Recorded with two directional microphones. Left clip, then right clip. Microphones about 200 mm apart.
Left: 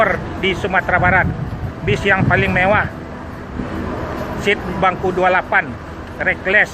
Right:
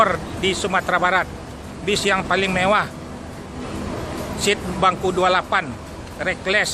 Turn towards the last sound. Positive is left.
turn(degrees=-20)  # may be behind; listen again after turning